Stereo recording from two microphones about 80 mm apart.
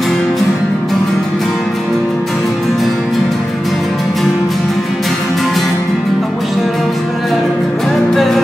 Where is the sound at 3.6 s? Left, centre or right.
Centre.